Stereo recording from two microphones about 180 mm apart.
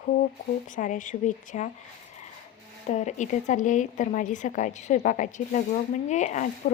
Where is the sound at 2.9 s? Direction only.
40° left (ahead or behind).